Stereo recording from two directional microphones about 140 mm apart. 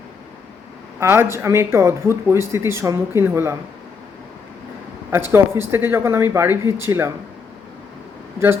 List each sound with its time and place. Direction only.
0.9 s speech: 15° right (ahead or behind)
5.1 s speech: 15° right (ahead or behind)